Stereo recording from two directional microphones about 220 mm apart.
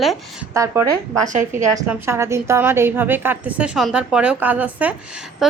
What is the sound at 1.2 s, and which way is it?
Speech, 35° right (ahead or behind).